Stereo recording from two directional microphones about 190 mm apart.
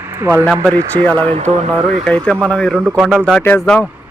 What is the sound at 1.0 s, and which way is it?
Speech, 10° left (ahead or behind).